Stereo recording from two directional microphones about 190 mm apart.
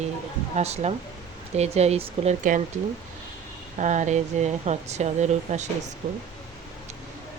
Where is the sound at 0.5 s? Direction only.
35° right (ahead or behind).